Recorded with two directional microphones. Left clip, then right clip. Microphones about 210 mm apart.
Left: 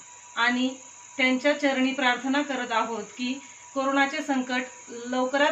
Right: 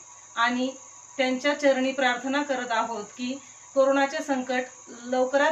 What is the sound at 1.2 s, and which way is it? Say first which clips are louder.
Speech: left 2 dB; 15° right (ahead or behind).